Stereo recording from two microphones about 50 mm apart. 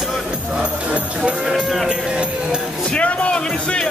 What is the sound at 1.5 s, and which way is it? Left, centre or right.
Music, centre.